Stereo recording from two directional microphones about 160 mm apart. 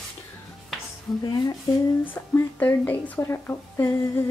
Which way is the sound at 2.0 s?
10° left (ahead or behind).